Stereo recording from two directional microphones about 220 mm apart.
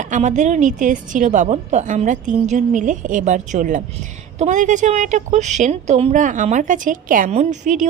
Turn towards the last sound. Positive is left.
turn(degrees=-35)  # may be behind; listen again after turning